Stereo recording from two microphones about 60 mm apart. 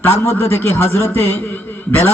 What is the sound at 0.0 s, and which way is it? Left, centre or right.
A man's voice, left.